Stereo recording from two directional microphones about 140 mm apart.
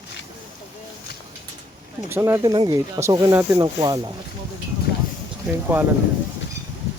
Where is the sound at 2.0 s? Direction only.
15° right (ahead or behind).